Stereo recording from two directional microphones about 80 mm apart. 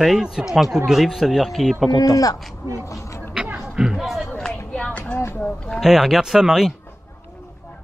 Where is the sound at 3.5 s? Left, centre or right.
Centre.